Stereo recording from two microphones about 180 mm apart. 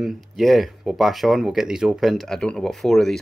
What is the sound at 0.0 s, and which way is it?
Speech, centre (ahead or behind).